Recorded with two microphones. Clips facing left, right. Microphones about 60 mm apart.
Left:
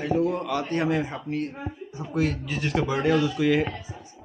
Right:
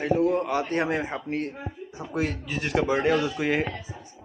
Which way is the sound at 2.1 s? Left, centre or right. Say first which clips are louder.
Left 2 dB; centre.